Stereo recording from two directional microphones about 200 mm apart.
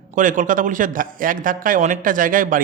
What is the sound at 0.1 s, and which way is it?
A man's voice, 40° right (ahead or behind).